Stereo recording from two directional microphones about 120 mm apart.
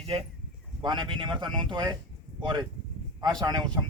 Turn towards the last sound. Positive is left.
turn(degrees=-35)  # may be behind; listen again after turning